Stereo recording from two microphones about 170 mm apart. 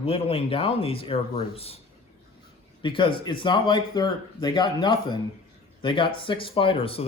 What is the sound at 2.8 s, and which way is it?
Speech, 30° left (ahead or behind).